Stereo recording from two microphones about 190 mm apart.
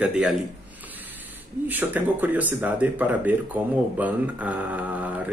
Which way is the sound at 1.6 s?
10° right (ahead or behind).